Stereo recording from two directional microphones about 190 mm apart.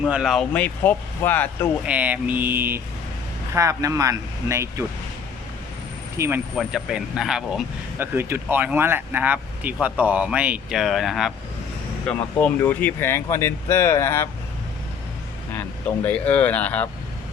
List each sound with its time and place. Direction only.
0.0 s speech: centre (ahead or behind)
1.8 s speech: 5° right (ahead or behind)
6.1 s speech: 15° right (ahead or behind)
6.6 s speech: centre (ahead or behind); by 14.3 s 15° left (ahead or behind)
16.0 s speech: 10° left (ahead or behind)